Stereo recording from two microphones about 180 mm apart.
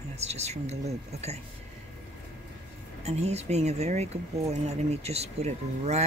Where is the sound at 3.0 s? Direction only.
35° right (ahead or behind).